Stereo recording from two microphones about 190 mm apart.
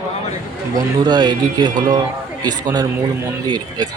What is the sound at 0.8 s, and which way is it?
Speech, 25° right (ahead or behind).